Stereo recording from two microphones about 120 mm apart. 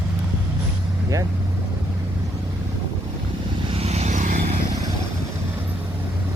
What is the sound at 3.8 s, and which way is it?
Vehicle, 65° right (ahead or behind).